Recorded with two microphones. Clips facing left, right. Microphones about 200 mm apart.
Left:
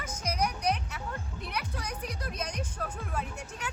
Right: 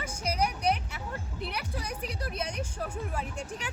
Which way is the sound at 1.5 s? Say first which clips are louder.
Left 1 dB; 30° right (ahead or behind).